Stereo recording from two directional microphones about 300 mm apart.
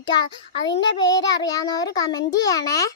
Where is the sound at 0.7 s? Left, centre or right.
Centre.